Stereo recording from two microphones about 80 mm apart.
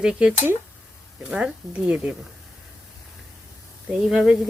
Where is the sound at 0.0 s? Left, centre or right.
Centre.